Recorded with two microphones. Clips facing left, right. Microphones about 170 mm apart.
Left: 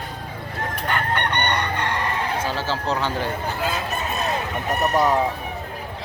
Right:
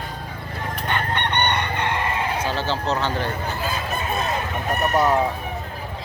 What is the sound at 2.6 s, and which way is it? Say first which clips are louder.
Speech: right 1 dB; 10° left (ahead or behind).